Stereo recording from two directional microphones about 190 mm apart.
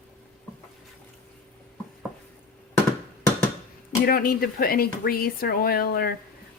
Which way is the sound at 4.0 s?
50° left (ahead or behind).